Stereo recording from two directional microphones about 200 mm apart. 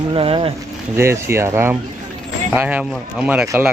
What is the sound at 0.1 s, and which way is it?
Speech, 25° right (ahead or behind).